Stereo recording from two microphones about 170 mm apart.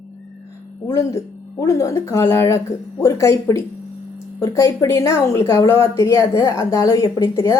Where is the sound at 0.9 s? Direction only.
20° left (ahead or behind).